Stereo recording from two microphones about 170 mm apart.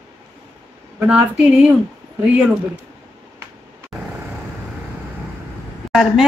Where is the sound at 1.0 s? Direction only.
5° right (ahead or behind).